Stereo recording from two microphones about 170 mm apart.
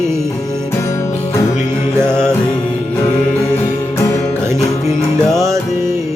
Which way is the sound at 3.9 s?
15° left (ahead or behind).